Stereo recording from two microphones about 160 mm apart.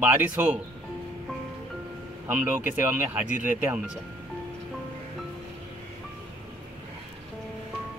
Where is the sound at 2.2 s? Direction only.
10° right (ahead or behind).